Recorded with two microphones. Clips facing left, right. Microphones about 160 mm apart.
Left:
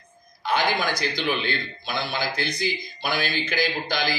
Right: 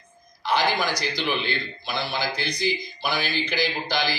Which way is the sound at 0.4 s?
50° left (ahead or behind).